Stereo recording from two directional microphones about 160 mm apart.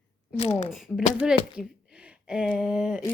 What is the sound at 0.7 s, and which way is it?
Speech, centre (ahead or behind).